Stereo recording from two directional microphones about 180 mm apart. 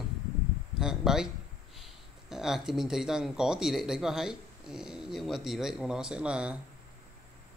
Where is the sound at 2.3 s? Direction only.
Centre (ahead or behind).